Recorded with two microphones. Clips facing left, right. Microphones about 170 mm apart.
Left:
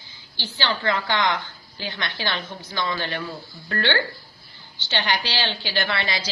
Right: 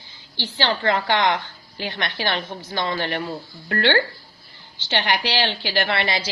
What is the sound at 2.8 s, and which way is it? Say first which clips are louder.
Speech: right 3 dB; 25° right (ahead or behind).